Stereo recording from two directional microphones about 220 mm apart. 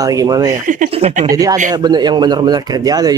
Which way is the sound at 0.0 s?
15° right (ahead or behind).